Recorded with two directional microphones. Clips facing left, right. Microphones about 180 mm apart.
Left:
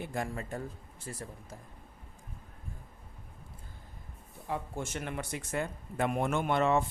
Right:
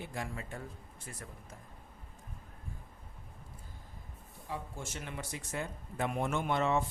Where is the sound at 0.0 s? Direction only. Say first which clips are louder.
Left 5 dB; 50° left (ahead or behind).